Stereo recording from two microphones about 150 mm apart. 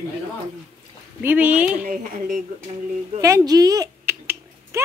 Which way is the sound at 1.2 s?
10° right (ahead or behind).